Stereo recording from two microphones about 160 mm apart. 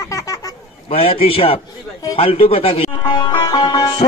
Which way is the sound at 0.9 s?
35° left (ahead or behind).